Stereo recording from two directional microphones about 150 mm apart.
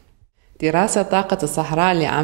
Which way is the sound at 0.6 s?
25° right (ahead or behind).